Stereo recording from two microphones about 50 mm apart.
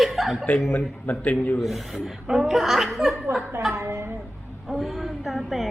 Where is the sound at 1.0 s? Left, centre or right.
Left.